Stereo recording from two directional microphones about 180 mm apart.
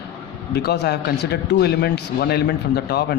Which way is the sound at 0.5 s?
65° left (ahead or behind).